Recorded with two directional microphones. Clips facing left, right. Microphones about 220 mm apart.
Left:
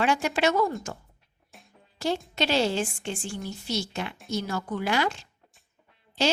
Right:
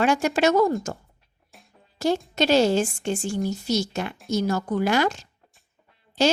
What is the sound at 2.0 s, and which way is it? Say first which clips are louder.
A woman's voice: right 5 dB; 45° right (ahead or behind).